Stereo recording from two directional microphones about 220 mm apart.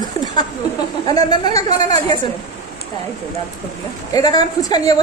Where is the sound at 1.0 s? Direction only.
20° left (ahead or behind).